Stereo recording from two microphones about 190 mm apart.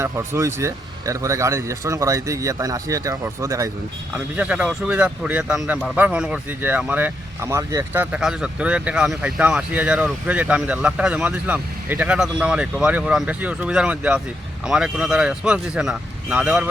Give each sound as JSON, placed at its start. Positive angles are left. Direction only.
{"t": 0.0, "sound": "speech", "side_deg": -15}
{"t": 4.4, "sound": "a man's voice", "side_deg": -5}